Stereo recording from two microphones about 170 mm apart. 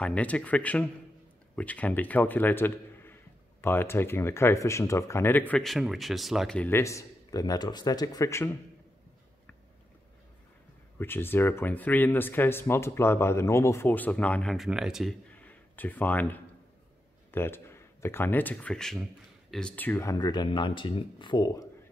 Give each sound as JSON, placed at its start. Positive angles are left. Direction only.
{"t": 0.0, "sound": "a man's voice", "side_deg": 10}
{"t": 11.0, "sound": "speech", "side_deg": 15}